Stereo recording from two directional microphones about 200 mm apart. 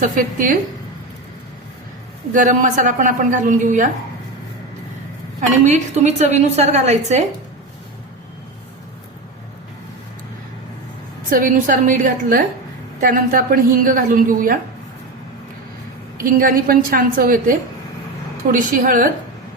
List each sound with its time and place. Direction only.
0.0 s a woman's voice: 40° right (ahead or behind)
2.3 s speech: 40° right (ahead or behind)
5.6 s speech: 35° right (ahead or behind)
11.3 s a woman's voice: 45° right (ahead or behind)
16.2 s a woman's voice: 45° right (ahead or behind)
18.5 s a woman's voice: 40° right (ahead or behind)